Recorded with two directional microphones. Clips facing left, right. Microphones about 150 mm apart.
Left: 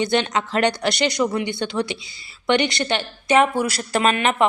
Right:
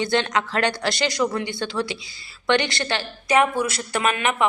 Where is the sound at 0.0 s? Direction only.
20° left (ahead or behind).